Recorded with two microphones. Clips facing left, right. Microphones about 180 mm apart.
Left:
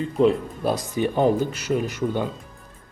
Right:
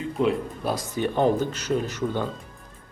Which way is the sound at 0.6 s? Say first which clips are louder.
Left 5 dB; 15° left (ahead or behind).